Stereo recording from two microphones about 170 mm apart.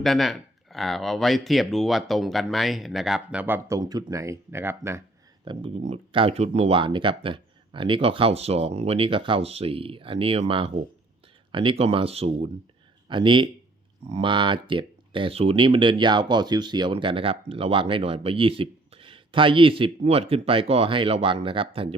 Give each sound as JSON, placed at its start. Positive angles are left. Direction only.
{"t": 0.0, "sound": "speech", "side_deg": 0}
{"t": 3.8, "sound": "speech", "side_deg": -25}
{"t": 5.5, "sound": "speech", "side_deg": -25}